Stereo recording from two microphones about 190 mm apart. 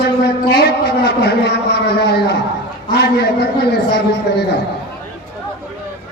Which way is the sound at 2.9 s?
60° left (ahead or behind).